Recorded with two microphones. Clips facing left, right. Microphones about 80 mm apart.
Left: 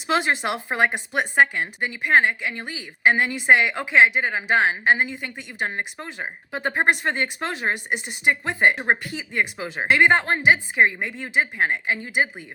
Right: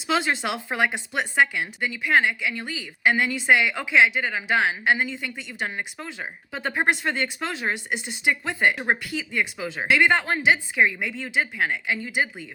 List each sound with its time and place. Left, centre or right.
0.1 s speech: left
1.5 s a woman's voice: left
5.4 s speech: centre
11.1 s speech: left
11.5 s a woman's voice: left
11.9 s speech: left